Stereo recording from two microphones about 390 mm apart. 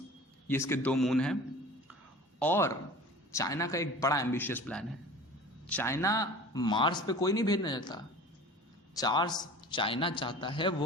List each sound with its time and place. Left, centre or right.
0.4 s a man's voice: centre
2.4 s a man's voice: centre